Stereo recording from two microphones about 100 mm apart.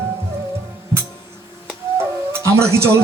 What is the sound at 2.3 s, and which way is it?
Music, 25° right (ahead or behind).